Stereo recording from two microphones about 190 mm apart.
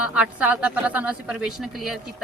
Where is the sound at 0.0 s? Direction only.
5° right (ahead or behind).